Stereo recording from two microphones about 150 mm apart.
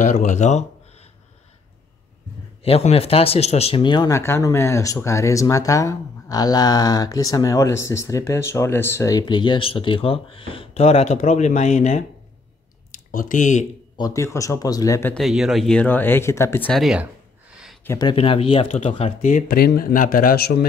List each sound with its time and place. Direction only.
0.0 s speech: 55° left (ahead or behind)
2.6 s speech: 40° left (ahead or behind)
12.9 s speech: 65° left (ahead or behind)
13.9 s speech: 25° left (ahead or behind)
15.1 s speech: centre (ahead or behind); by 16.7 s 15° left (ahead or behind)
16.7 s speech: 5° right (ahead or behind)
17.8 s speech: 25° left (ahead or behind)
18.1 s speech: 35° left (ahead or behind)
19.3 s speech: 90° left